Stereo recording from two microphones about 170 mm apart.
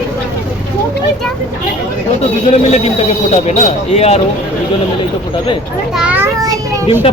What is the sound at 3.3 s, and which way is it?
Speech, 40° left (ahead or behind).